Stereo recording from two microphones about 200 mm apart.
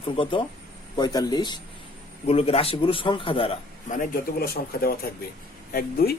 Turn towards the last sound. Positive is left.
turn(degrees=50)  # may be behind; listen again after turning